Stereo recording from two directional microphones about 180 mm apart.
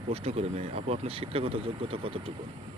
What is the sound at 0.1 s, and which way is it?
Speech, 35° right (ahead or behind).